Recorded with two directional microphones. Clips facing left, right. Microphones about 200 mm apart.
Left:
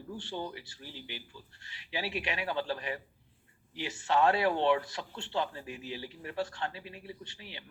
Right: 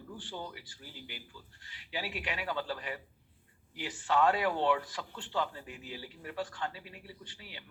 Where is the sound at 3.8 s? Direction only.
25° left (ahead or behind).